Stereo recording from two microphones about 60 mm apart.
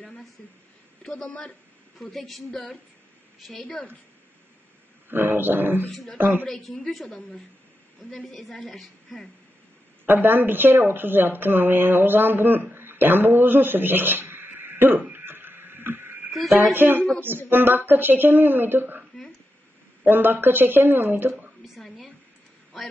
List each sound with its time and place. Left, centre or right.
0.4 s a woman's voice: left; by 3.8 s centre
5.1 s speech: right
5.9 s a woman's voice: centre
6.1 s speech: right
6.4 s a woman's voice: centre
10.0 s speech: right
15.1 s a sound: right
16.5 s speech: right
21.6 s a sound: centre
22.7 s a woman's voice: centre